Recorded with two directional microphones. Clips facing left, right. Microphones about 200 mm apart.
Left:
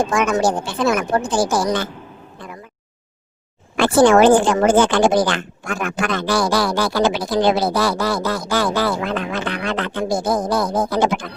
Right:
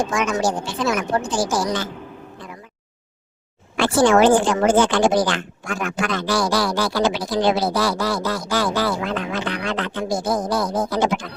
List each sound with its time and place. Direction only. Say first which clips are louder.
0.0 s speech: left 3 dB; 55° left (ahead or behind)
3.8 s speech: left 3 dB; 55° left (ahead or behind)